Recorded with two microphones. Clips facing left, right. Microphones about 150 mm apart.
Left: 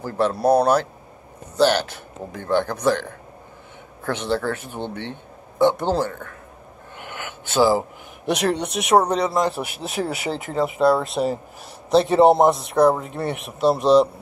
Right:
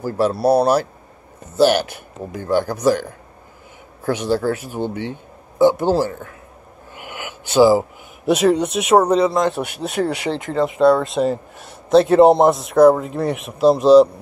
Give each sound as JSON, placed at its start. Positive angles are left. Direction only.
{"t": 0.0, "sound": "speech", "side_deg": -10}
{"t": 7.0, "sound": "a sound", "side_deg": -10}
{"t": 8.3, "sound": "speech", "side_deg": -5}